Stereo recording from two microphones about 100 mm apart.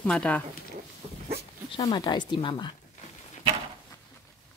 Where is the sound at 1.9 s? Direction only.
50° left (ahead or behind).